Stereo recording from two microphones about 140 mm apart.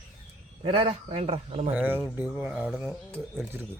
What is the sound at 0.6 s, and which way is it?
Speech, 40° right (ahead or behind).